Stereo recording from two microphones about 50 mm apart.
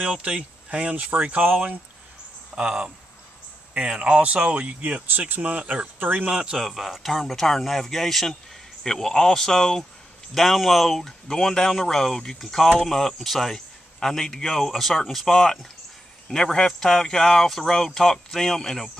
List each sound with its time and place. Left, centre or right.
0.0 s speech: right
2.5 s speech: centre
5.9 s speech: right
6.3 s a man's voice: centre